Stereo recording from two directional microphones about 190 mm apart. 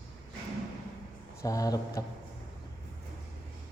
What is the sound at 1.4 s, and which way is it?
Speech, 20° left (ahead or behind).